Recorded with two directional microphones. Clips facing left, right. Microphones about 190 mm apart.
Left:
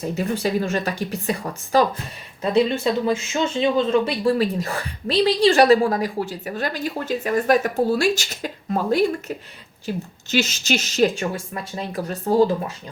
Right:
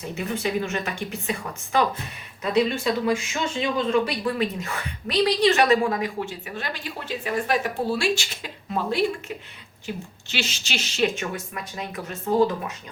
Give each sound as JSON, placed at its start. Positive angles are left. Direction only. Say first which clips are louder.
{"t": 0.2, "sound": "speech", "louder": "left 3 dB", "side_deg": 35}